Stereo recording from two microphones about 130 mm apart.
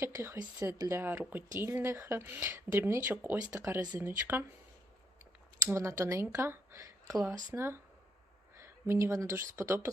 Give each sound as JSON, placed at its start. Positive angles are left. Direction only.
{"t": 0.0, "sound": "speech", "side_deg": -20}
{"t": 5.6, "sound": "speech", "side_deg": -20}